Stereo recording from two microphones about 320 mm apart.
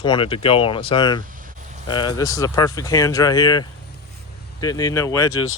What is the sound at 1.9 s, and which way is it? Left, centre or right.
Speech, centre.